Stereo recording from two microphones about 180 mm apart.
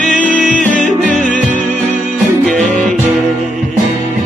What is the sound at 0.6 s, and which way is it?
Music, 45° left (ahead or behind).